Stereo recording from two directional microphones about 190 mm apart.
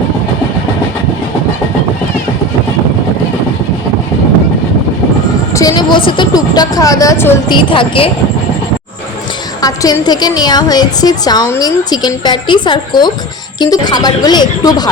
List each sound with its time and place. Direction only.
5.5 s speech: 20° left (ahead or behind)
7.4 s a woman's voice: 25° left (ahead or behind)
9.6 s a woman's voice: 20° left (ahead or behind)